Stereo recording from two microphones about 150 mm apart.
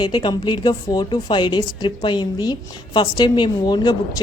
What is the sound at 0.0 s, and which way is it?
A woman's voice, 30° left (ahead or behind).